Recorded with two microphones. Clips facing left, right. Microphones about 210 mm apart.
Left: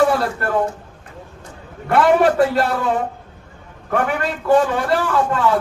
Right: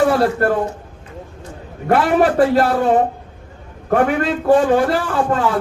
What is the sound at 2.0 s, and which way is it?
A man's voice, 45° right (ahead or behind).